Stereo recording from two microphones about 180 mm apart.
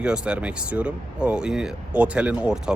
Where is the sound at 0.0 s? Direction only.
5° right (ahead or behind).